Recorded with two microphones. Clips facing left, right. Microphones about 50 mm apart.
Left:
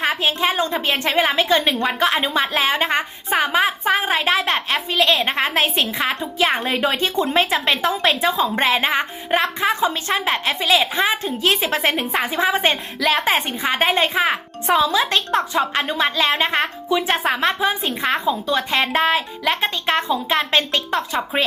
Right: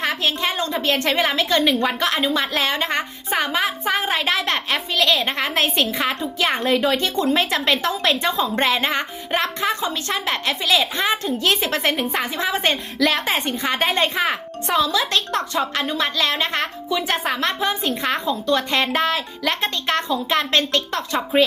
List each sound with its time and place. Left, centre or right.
0.0 s a woman's voice: centre